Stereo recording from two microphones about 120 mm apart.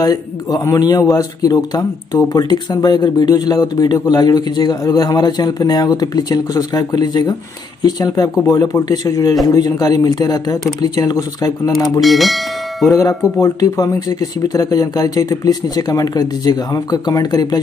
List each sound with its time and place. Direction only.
0.0 s speech: 30° left (ahead or behind)
12.0 s speech: centre (ahead or behind)
13.4 s speech: 30° left (ahead or behind)